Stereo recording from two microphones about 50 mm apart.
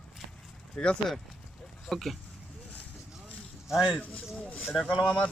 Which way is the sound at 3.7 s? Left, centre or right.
Centre.